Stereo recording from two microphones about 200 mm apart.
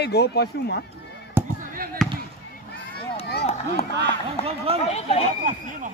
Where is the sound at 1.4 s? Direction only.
10° right (ahead or behind).